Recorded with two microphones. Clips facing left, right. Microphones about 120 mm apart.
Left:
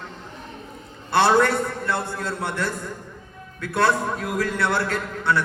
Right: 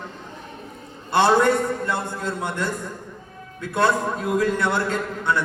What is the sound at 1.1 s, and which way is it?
A man's voice, 15° right (ahead or behind).